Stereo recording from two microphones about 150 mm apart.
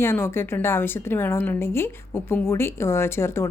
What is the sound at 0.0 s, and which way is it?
A woman's voice, 15° left (ahead or behind).